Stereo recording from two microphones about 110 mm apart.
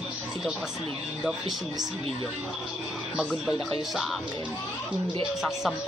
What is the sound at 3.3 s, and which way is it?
Speech, centre (ahead or behind).